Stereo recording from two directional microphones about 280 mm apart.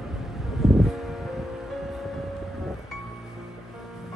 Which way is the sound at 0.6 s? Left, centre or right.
Centre.